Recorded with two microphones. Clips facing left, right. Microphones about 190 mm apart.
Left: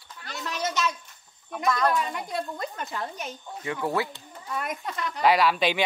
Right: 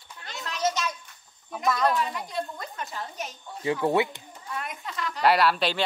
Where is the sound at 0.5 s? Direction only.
60° left (ahead or behind).